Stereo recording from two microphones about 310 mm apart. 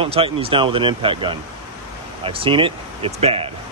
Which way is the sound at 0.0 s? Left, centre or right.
Centre.